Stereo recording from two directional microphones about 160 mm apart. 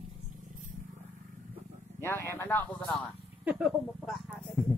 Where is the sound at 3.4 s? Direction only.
5° right (ahead or behind).